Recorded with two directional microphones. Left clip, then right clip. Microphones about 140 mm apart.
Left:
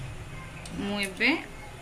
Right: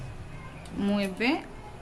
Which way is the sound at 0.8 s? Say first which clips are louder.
Left 2 dB; 90° right.